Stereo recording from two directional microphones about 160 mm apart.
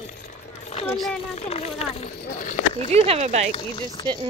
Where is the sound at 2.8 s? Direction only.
40° right (ahead or behind).